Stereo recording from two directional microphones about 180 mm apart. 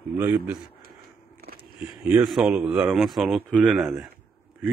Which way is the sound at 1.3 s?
55° right (ahead or behind).